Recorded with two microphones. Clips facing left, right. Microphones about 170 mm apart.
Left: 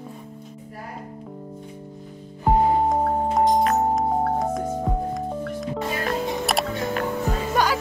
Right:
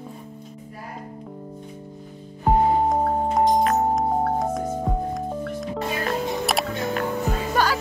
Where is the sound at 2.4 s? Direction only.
Centre (ahead or behind).